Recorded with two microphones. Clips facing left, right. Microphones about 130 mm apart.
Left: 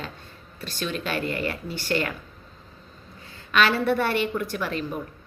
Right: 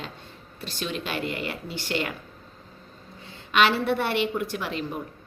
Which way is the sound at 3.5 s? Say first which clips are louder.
Even; 20° right (ahead or behind).